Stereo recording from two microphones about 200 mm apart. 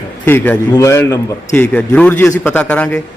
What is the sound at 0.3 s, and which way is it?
A man's voice, 10° left (ahead or behind).